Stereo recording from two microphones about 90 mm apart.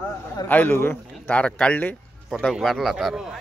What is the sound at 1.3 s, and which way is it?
Speech, 15° left (ahead or behind).